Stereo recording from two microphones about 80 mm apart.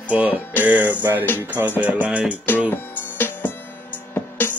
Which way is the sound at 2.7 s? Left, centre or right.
Left.